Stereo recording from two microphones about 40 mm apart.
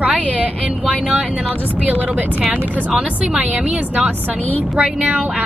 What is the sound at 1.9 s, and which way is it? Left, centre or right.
Speech, right.